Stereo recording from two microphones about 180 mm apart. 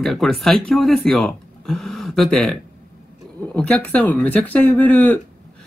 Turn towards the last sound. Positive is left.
turn(degrees=10)  # may be behind; listen again after turning